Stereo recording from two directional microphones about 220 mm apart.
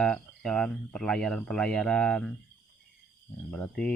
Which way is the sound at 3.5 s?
5° left (ahead or behind).